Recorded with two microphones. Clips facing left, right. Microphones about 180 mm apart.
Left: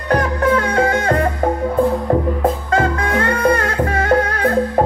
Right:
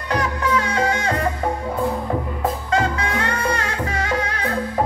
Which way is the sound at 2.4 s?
50° left (ahead or behind).